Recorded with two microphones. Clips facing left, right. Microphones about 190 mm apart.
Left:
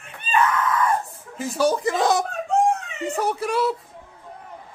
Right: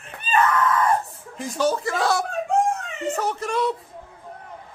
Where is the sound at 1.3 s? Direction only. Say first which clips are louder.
Left 2 dB; 5° left (ahead or behind).